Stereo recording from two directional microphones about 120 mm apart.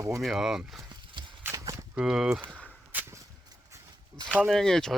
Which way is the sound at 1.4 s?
25° right (ahead or behind).